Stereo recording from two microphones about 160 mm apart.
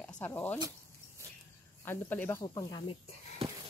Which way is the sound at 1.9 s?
15° left (ahead or behind).